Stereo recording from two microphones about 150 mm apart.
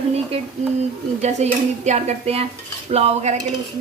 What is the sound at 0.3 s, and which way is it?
Speech, 40° right (ahead or behind).